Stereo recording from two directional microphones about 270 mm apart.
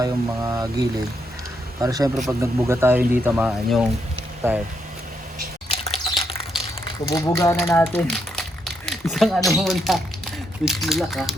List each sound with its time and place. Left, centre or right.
0.0 s speech: centre
5.6 s a sound: left
6.8 s speech: centre